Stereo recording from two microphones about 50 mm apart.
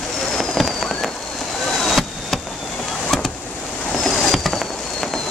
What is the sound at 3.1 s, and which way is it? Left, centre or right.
Vehicle, centre.